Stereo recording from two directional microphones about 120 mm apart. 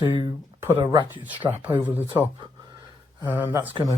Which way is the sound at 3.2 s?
15° right (ahead or behind).